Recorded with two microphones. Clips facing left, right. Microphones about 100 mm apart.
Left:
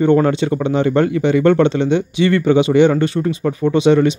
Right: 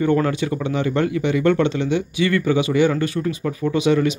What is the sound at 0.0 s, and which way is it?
Speech, 30° left (ahead or behind).